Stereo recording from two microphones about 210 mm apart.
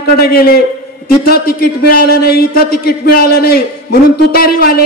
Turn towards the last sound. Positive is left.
turn(degrees=45)  # may be behind; listen again after turning